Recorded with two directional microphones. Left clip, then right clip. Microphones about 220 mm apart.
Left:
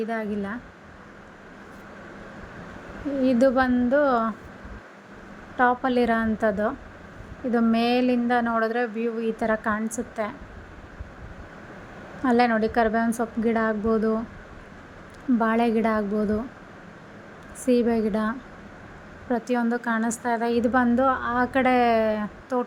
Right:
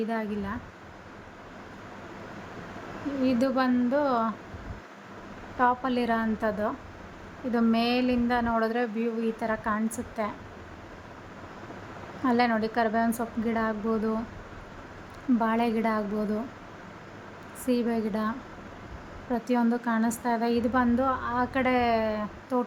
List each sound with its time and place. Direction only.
0.0 s a woman's voice: 10° left (ahead or behind)
3.2 s a woman's voice: 15° left (ahead or behind)
5.5 s a woman's voice: 20° left (ahead or behind)
12.2 s a woman's voice: 15° left (ahead or behind)
15.4 s a woman's voice: 15° left (ahead or behind)
17.7 s a woman's voice: 15° left (ahead or behind)